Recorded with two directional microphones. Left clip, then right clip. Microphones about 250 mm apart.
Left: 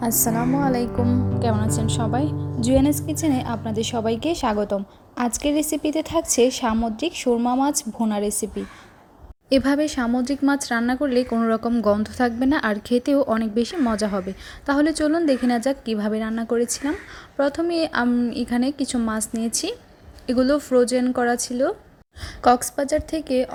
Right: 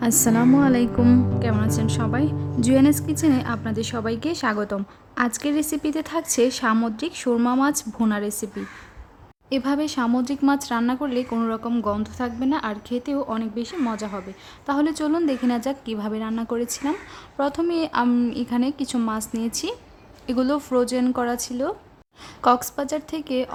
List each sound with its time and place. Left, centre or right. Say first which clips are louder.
0.0 s a woman's voice: right 3 dB; right
0.9 s a woman's voice: right 4 dB; centre
2.6 s speech: even; right
2.8 s a woman's voice: right 2 dB; centre
9.5 s a woman's voice: left 4 dB; centre